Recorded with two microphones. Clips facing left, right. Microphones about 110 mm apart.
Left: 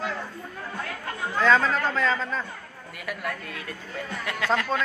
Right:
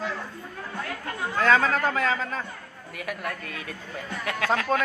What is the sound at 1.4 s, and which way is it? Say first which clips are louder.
Speech: even; 50° right (ahead or behind).